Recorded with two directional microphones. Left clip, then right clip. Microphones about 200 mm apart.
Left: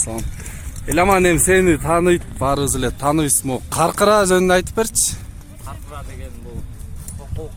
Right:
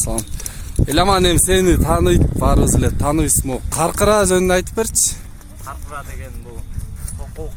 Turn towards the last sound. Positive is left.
turn(degrees=0)  # may be behind; listen again after turning